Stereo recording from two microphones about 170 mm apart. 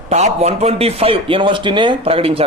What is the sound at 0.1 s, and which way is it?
A man's voice, 40° right (ahead or behind).